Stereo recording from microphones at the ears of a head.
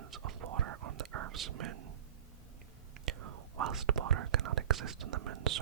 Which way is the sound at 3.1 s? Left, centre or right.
Right.